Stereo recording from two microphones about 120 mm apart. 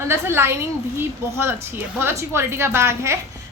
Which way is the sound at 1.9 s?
20° right (ahead or behind).